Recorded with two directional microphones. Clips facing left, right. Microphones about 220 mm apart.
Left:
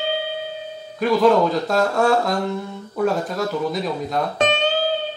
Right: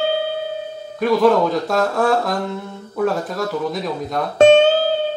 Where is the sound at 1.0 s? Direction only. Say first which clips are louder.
Right 1 dB; centre (ahead or behind).